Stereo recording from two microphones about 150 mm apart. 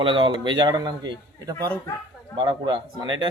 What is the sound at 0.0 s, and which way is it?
Speech, 35° right (ahead or behind).